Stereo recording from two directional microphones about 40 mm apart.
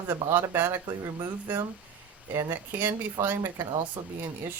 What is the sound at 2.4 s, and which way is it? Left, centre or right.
Speech, right.